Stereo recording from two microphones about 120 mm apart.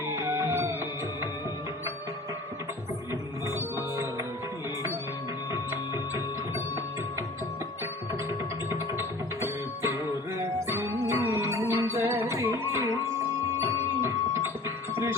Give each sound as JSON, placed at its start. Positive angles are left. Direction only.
{"t": 0.1, "sound": "music", "side_deg": -25}
{"t": 3.1, "sound": "music", "side_deg": -25}
{"t": 8.7, "sound": "music", "side_deg": -25}